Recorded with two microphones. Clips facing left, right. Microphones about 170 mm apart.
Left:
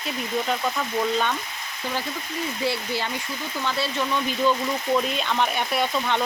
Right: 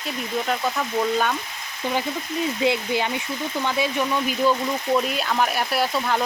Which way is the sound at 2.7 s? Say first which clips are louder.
Right 4 dB; 20° right (ahead or behind).